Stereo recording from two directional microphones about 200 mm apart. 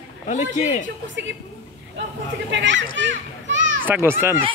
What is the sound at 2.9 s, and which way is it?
Children playing, 65° right (ahead or behind).